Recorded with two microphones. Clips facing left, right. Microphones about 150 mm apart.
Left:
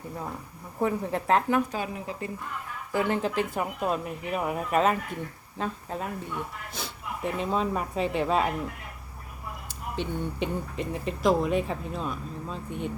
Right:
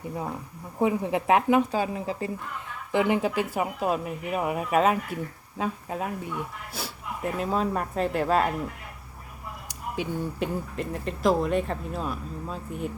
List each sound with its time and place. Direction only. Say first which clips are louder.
0.8 s speech: right 3 dB; 15° right (ahead or behind)
1.7 s speech: right 5 dB; 30° right (ahead or behind)
2.9 s speech: right 3 dB; 15° right (ahead or behind)
9.6 s speech: right 1 dB; 10° right (ahead or behind)